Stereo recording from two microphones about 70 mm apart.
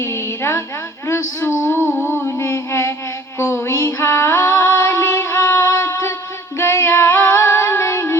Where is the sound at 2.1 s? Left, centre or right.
Left.